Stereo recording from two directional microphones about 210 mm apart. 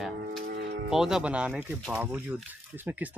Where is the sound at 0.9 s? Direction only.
Centre (ahead or behind).